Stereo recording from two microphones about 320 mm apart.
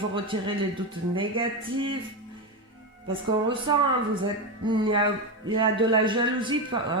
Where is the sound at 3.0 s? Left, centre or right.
Centre.